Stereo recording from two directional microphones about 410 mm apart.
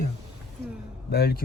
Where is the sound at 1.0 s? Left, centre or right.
Left.